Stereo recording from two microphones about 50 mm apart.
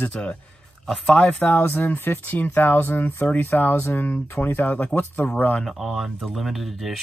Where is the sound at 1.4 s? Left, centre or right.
Left.